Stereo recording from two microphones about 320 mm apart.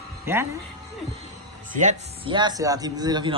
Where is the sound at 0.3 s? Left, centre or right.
Centre.